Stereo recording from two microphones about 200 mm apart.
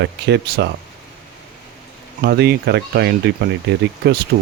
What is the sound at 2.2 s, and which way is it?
Speech, 55° right (ahead or behind).